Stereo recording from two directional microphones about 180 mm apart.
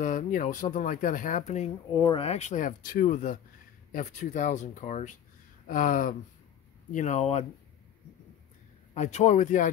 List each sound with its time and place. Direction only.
0.0 s speech: 45° left (ahead or behind)
2.0 s speech: 30° left (ahead or behind)
8.9 s speech: 40° left (ahead or behind)